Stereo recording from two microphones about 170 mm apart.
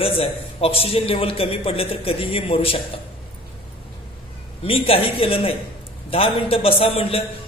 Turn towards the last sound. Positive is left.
turn(degrees=35)  # may be behind; listen again after turning